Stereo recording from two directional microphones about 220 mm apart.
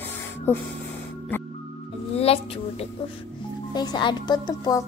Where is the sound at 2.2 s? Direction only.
25° left (ahead or behind).